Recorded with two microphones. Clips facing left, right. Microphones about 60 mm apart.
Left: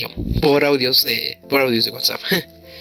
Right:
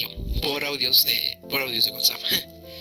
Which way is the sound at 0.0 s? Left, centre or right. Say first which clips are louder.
Left 12 dB; left.